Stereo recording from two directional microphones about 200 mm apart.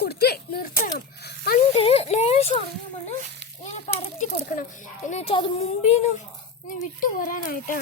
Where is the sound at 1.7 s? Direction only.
30° left (ahead or behind).